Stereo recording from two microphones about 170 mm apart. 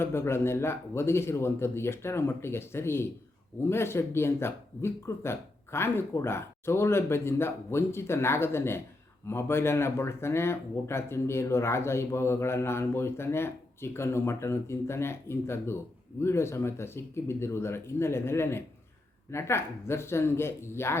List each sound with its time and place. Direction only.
0.0 s speech: 15° left (ahead or behind)